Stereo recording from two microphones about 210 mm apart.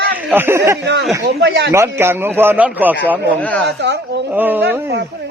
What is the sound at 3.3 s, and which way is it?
Speech, 5° left (ahead or behind).